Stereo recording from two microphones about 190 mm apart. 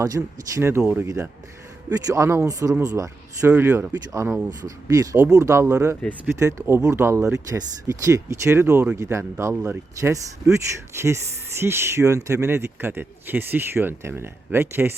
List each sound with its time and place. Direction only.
0.2 s speech: 5° right (ahead or behind)
3.5 s speech: 5° right (ahead or behind)